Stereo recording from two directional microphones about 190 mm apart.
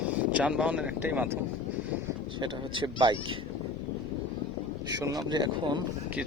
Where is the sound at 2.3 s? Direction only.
25° right (ahead or behind).